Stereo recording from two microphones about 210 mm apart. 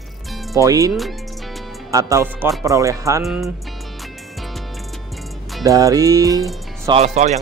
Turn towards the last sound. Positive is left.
turn(degrees=-30)  # may be behind; listen again after turning